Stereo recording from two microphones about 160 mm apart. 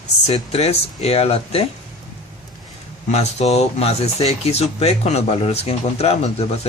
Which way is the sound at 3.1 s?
40° left (ahead or behind).